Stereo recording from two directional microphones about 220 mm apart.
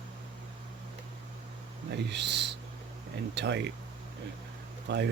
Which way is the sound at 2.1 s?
50° right (ahead or behind).